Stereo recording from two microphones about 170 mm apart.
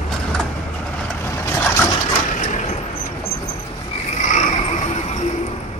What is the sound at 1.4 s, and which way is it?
Boat, 15° left (ahead or behind).